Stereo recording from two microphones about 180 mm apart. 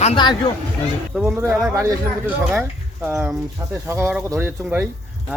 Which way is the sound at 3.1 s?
5° right (ahead or behind).